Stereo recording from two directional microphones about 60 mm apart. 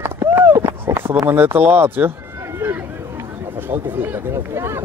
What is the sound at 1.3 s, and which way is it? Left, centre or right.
Speech, right.